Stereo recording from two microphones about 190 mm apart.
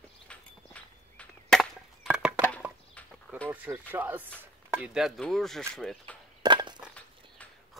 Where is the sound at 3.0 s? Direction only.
5° left (ahead or behind).